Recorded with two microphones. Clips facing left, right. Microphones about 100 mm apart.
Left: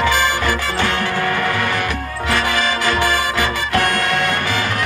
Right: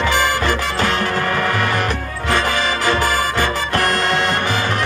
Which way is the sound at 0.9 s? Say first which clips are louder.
Even; 40° right (ahead or behind).